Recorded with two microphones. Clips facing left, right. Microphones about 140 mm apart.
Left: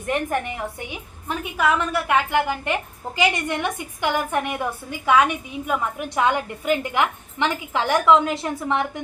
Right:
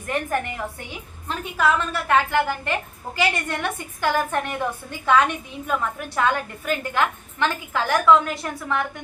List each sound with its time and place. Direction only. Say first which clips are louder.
0.1 s a woman's voice: left 1 dB; 15° left (ahead or behind)